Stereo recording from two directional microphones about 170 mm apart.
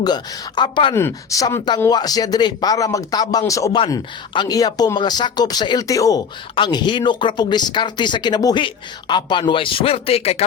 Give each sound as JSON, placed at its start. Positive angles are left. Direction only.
{"t": 0.0, "sound": "speech", "side_deg": 25}
{"t": 0.9, "sound": "speech", "side_deg": 15}